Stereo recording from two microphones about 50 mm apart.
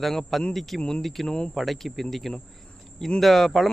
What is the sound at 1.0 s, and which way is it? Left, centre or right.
Speech, centre.